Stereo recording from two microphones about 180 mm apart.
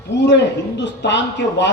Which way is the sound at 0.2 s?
75° left (ahead or behind).